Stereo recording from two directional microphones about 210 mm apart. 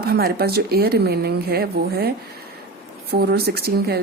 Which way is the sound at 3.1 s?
50° right (ahead or behind).